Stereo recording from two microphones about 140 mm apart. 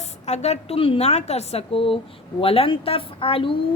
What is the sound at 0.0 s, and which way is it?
A woman's voice, 55° left (ahead or behind).